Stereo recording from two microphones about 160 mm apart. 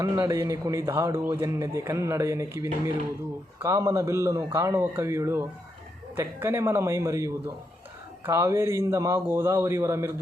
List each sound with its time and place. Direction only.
0.0 s a man's voice: 20° right (ahead or behind)